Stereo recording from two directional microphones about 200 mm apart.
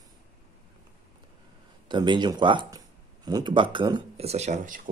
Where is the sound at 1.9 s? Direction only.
20° right (ahead or behind); by 4.8 s 40° right (ahead or behind).